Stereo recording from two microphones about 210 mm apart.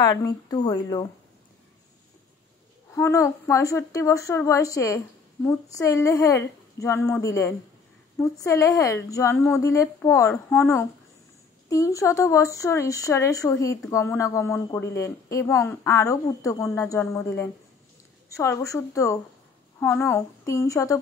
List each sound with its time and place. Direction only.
0.0 s speech: 20° left (ahead or behind)
2.9 s speech: 15° left (ahead or behind)